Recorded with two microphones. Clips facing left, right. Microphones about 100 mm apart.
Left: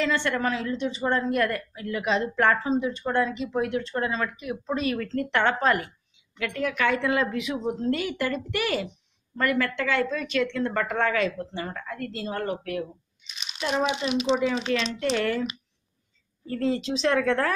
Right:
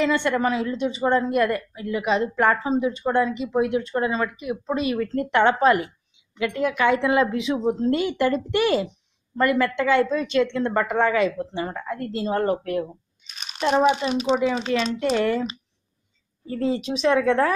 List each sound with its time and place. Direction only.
0.0 s a woman's voice: 15° right (ahead or behind); by 12.8 s 35° right (ahead or behind)
13.3 s crumpling: 45° right (ahead or behind)
13.8 s speech: 40° right (ahead or behind)
14.3 s a woman's voice: 10° right (ahead or behind)